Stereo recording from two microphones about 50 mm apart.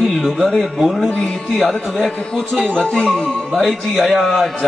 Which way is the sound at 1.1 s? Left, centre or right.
Centre.